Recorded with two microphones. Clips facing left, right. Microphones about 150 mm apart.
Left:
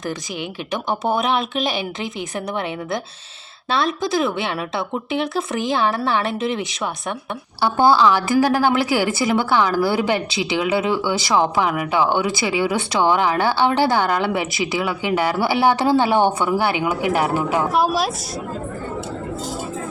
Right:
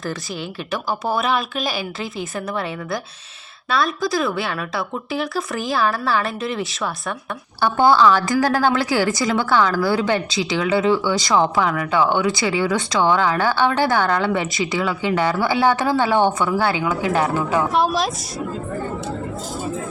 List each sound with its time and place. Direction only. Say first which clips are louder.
0.7 s a woman's voice: left 1 dB; 20° left (ahead or behind); by 18.1 s 5° left (ahead or behind)